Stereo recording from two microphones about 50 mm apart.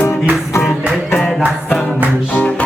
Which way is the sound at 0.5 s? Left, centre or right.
Left.